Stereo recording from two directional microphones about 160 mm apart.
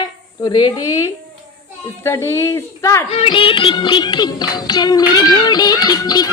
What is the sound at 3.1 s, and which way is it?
Music, 35° left (ahead or behind).